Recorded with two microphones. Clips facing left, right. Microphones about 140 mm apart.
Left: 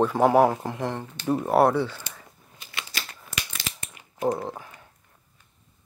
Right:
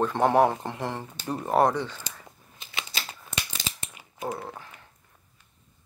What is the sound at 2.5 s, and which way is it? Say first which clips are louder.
Scissors: even; 20° right (ahead or behind).